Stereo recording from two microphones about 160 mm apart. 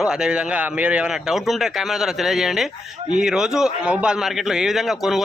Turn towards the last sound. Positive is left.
turn(degrees=0)  # may be behind; listen again after turning